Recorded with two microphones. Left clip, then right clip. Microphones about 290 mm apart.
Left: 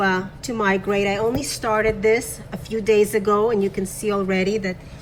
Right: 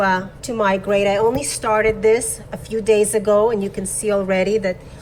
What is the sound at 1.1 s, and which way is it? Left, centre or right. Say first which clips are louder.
A woman's voice: right 5 dB; centre.